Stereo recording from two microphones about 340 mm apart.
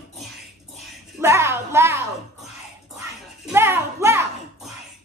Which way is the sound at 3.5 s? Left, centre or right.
Centre.